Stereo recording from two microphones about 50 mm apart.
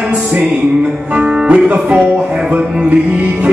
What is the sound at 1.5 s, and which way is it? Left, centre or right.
Music, right.